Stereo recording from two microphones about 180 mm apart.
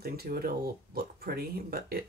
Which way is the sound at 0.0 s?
55° right (ahead or behind).